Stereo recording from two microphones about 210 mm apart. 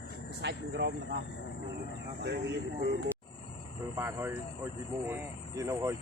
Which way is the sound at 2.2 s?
50° right (ahead or behind).